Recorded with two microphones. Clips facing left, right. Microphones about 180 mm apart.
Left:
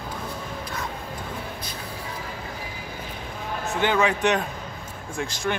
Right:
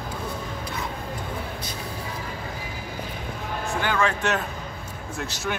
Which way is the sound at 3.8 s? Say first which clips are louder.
Left 3 dB; 20° left (ahead or behind).